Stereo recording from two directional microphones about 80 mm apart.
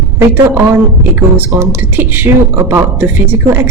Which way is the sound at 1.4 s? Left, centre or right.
Right.